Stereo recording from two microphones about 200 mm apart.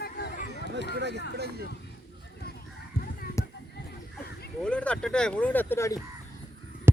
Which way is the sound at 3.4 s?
15° left (ahead or behind).